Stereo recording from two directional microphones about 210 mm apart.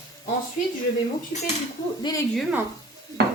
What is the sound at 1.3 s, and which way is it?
Speech, 30° left (ahead or behind).